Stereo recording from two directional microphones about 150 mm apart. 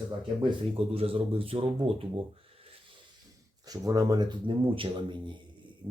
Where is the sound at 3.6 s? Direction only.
25° right (ahead or behind).